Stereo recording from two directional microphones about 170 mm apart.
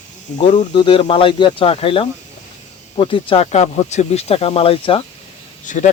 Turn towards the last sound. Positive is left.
turn(degrees=50)  # may be behind; listen again after turning